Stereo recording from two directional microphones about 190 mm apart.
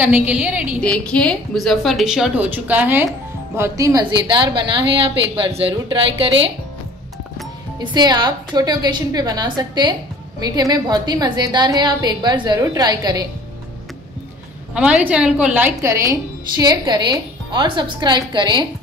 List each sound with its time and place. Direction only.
0.0 s a woman's voice: 10° right (ahead or behind)
0.8 s a woman's voice: 5° left (ahead or behind); by 6.5 s 30° right (ahead or behind)
7.8 s a woman's voice: 20° right (ahead or behind)
14.7 s a woman's voice: 5° right (ahead or behind); by 18.7 s 25° right (ahead or behind)